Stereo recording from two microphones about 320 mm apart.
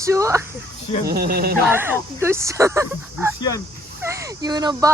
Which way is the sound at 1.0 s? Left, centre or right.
Right.